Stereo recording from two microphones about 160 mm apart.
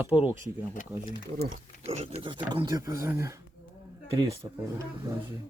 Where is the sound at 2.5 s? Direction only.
25° right (ahead or behind).